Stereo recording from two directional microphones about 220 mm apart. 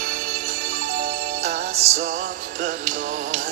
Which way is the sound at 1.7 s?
30° right (ahead or behind).